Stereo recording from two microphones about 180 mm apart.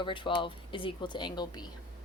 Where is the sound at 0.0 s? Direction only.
25° left (ahead or behind).